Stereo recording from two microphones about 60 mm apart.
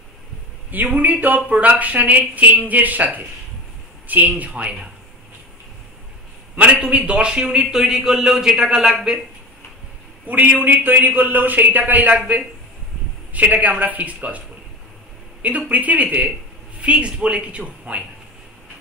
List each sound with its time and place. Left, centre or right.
0.7 s speech: right
6.5 s a man's voice: right; by 8.9 s centre
8.9 s a man's voice: centre
10.2 s speech: right
13.3 s speech: right
15.4 s speech: right